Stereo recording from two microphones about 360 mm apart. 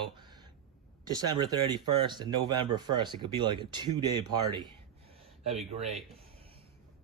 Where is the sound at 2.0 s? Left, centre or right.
Centre.